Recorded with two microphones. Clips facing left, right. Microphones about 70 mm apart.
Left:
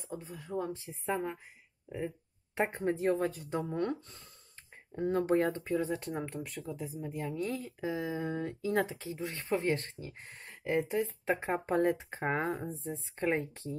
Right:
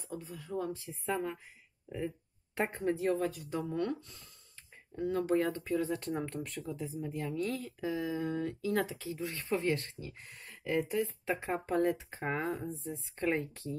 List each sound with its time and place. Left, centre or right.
0.0 s speech: left
6.2 s speech: centre
6.6 s speech: centre